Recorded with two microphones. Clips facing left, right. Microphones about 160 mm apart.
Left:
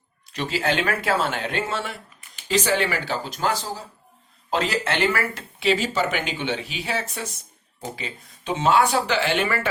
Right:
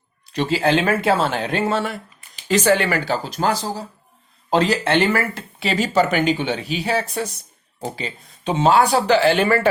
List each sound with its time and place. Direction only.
0.3 s speech: 30° right (ahead or behind)
2.5 s speech: 55° right (ahead or behind)
3.2 s speech: 40° right (ahead or behind)